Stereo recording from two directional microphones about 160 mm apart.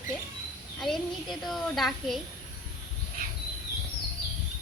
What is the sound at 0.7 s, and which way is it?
Speech, centre (ahead or behind).